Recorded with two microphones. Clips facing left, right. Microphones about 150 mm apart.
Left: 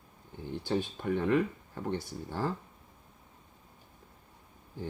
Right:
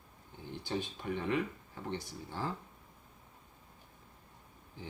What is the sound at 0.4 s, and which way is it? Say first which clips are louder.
Speech: left 6 dB; 55° left (ahead or behind).